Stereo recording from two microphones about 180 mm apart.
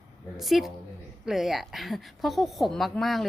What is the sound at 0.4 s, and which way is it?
A woman's voice, centre (ahead or behind).